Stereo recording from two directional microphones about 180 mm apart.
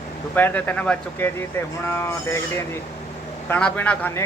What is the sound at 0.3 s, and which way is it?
Speech, 10° left (ahead or behind).